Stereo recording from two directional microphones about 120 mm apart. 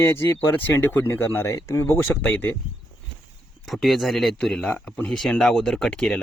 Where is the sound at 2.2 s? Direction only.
10° left (ahead or behind).